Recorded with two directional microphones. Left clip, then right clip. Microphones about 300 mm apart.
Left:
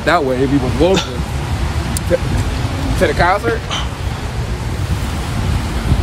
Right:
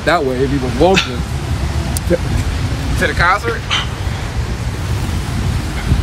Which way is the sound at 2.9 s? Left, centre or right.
Left.